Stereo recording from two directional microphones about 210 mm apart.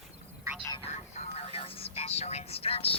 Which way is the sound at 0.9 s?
30° left (ahead or behind).